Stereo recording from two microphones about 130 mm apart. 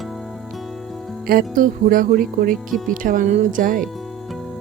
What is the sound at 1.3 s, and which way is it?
Speech, 90° right.